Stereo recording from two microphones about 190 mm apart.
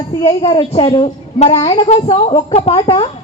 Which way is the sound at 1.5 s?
20° left (ahead or behind).